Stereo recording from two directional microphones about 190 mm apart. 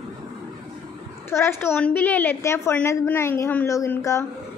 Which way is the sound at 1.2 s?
10° left (ahead or behind).